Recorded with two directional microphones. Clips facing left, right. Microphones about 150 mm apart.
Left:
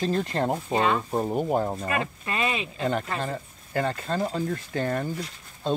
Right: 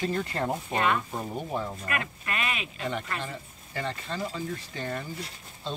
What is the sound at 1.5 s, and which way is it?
Speech, 45° left (ahead or behind).